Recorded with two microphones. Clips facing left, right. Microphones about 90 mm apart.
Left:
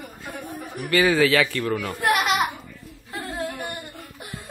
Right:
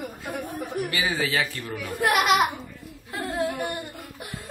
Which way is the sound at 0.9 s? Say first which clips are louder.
Left 12 dB; 70° left (ahead or behind).